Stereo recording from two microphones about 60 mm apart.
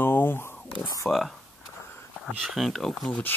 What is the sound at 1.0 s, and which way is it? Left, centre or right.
Speech, centre.